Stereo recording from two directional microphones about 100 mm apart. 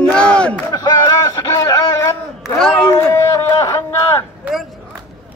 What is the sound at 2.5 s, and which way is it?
Speech, 5° left (ahead or behind).